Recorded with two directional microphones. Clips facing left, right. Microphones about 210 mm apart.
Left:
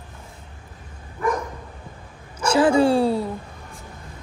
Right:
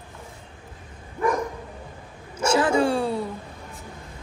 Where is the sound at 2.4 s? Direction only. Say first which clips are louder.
Left 3 dB; 30° left (ahead or behind).